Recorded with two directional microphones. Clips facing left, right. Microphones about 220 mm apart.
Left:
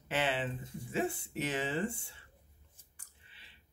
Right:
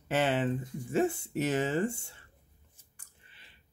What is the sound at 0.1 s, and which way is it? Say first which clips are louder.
Speech: right 6 dB; 45° right (ahead or behind).